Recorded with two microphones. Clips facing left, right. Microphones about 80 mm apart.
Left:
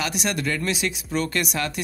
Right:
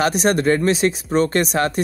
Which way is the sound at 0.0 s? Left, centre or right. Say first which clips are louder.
Right 9 dB; right.